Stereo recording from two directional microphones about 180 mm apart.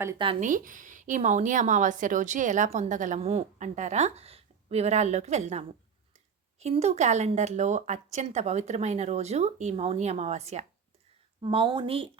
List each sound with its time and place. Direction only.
0.2 s speech: 30° right (ahead or behind)
0.4 s speech: 45° right (ahead or behind); by 12.1 s 30° right (ahead or behind)